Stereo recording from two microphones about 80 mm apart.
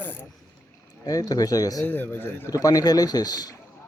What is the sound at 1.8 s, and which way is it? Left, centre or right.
Speech, left.